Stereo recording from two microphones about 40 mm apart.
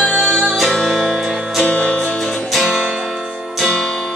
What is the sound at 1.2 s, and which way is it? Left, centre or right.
Music, centre.